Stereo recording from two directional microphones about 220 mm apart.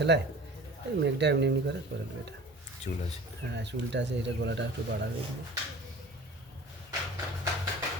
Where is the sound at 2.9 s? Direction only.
40° left (ahead or behind).